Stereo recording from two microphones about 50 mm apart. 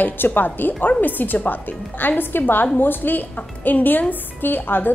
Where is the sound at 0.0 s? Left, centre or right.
Left.